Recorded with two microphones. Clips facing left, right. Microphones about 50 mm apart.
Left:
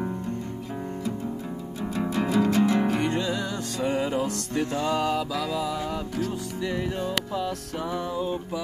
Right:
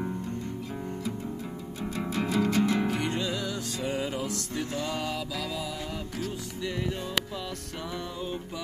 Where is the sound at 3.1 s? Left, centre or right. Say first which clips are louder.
Left 4 dB; left.